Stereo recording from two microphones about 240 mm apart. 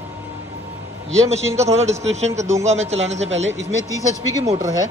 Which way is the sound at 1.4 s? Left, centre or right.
Centre.